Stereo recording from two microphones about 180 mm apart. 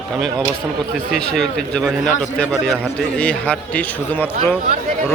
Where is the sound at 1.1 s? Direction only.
5° left (ahead or behind).